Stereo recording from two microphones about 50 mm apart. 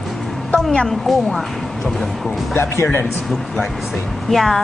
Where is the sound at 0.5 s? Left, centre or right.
Centre.